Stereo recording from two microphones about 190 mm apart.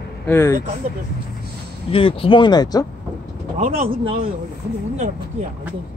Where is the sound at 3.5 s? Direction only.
35° right (ahead or behind).